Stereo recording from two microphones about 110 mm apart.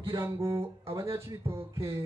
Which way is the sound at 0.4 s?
25° right (ahead or behind).